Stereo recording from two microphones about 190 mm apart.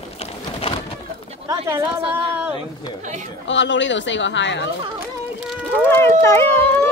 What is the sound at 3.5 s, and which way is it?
Speech, 75° left (ahead or behind).